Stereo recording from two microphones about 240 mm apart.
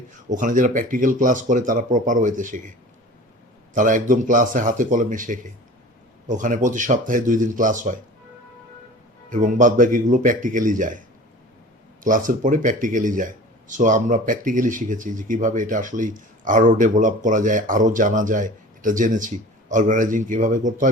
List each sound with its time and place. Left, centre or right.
0.3 s speech: right
3.8 s speech: right
9.3 s speech: right
12.0 s speech: right